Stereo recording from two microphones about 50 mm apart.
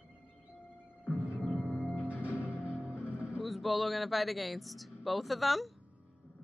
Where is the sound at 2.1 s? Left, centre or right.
Right.